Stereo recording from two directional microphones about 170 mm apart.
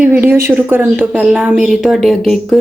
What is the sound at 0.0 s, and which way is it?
A woman's voice, 15° right (ahead or behind).